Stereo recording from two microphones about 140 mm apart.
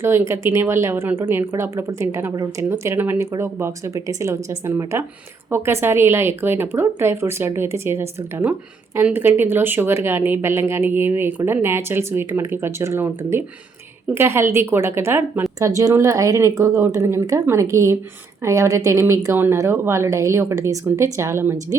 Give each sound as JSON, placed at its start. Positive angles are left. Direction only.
{"t": 0.0, "sound": "a woman's voice", "side_deg": -15}